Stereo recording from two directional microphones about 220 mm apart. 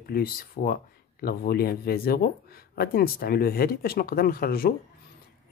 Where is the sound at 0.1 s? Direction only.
40° left (ahead or behind).